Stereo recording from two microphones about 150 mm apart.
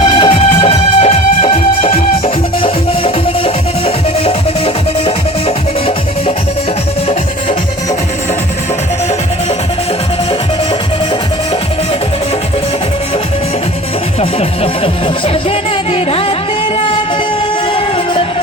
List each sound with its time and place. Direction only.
0.0 s music: 30° left (ahead or behind)
0.7 s music: 45° left (ahead or behind)
14.2 s music: 40° left (ahead or behind)
17.7 s music: 35° left (ahead or behind)